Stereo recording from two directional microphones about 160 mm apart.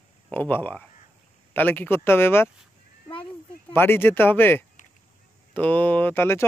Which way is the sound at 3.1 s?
35° left (ahead or behind).